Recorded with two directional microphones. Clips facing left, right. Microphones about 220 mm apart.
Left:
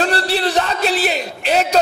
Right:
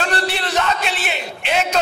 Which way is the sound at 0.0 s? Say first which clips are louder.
Left 4 dB; 35° left (ahead or behind).